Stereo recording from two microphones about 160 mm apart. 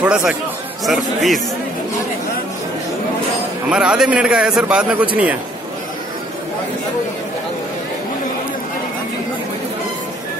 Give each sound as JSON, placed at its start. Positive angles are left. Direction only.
{"t": 0.0, "sound": "a man's voice", "side_deg": -10}
{"t": 3.7, "sound": "a man's voice", "side_deg": -5}